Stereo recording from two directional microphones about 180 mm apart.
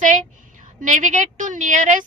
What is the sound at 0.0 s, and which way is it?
A woman's voice, 45° right (ahead or behind).